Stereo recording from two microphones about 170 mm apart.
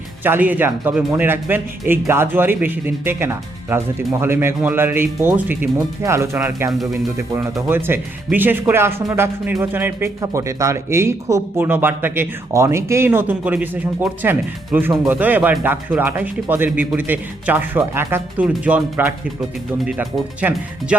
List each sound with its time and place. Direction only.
0.2 s speech: 10° right (ahead or behind)
7.7 s speech: 10° right (ahead or behind)